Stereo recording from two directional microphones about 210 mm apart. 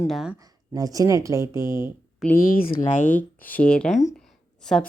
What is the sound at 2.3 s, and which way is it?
Speech, 40° left (ahead or behind).